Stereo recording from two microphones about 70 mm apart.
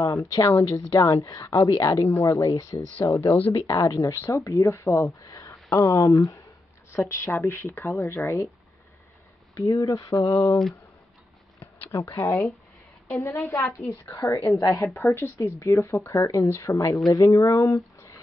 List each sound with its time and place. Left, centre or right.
0.0 s speech: left
2.3 s speech: left
3.0 s speech: left
3.3 s speech: left
3.6 s speech: left
5.2 s a sound: left
5.9 s speech: left
6.9 s speech: left
9.6 s speech: left
11.6 s a sound: left
13.1 s speech: left